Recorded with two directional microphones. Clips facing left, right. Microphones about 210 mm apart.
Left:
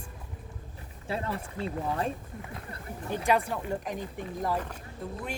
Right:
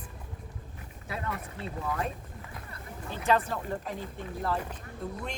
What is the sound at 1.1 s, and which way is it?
Speech, 30° left (ahead or behind).